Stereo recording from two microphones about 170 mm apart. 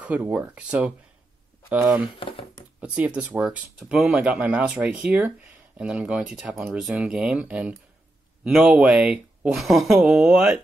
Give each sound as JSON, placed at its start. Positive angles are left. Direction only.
{"t": 0.0, "sound": "speech", "side_deg": -10}
{"t": 2.1, "sound": "speech", "side_deg": 30}
{"t": 2.8, "sound": "speech", "side_deg": -10}